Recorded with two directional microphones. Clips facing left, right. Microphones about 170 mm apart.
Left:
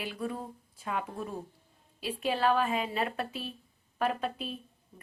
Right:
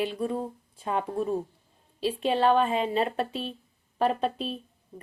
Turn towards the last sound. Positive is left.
turn(degrees=-30)  # may be behind; listen again after turning